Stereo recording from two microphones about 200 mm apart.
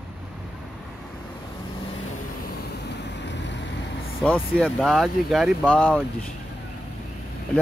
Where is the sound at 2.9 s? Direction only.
60° left (ahead or behind).